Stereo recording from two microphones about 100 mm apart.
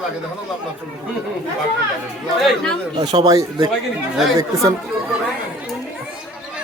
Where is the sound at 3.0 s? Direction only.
45° right (ahead or behind).